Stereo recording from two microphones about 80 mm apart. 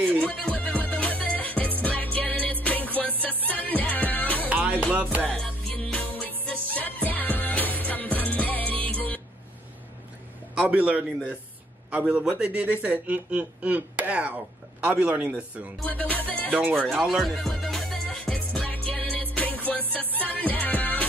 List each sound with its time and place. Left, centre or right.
0.2 s music: centre
4.5 s music: centre
5.3 s music: centre
10.5 s a man's voice: centre
15.9 s music: centre
16.4 s speech: centre
16.7 s speech: centre
17.2 s music: centre; by 21.0 s left